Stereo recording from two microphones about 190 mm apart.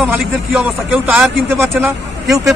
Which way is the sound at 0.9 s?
Centre (ahead or behind).